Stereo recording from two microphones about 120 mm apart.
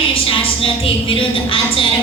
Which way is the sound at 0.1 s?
50° left (ahead or behind).